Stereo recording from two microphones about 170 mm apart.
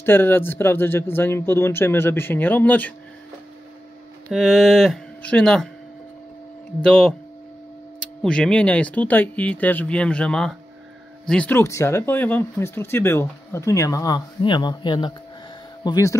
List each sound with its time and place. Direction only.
0.0 s speech: 10° left (ahead or behind)
4.3 s speech: centre (ahead or behind)
6.8 s speech: 5° left (ahead or behind)
8.2 s speech: 5° left (ahead or behind); by 16.2 s 20° left (ahead or behind)